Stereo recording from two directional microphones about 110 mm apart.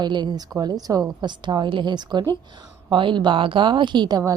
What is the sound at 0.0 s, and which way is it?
A woman's voice, 40° right (ahead or behind).